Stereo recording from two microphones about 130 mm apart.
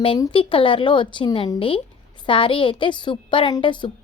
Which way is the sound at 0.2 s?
40° left (ahead or behind).